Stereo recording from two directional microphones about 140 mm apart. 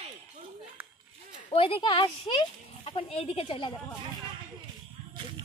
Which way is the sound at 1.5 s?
40° left (ahead or behind).